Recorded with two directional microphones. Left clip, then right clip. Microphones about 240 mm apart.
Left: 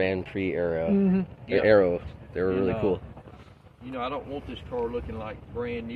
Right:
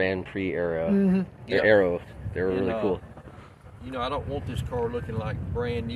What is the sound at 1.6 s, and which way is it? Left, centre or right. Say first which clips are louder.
Speech: even; centre.